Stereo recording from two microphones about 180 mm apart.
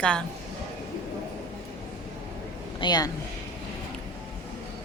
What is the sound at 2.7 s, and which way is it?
Speech, 25° left (ahead or behind).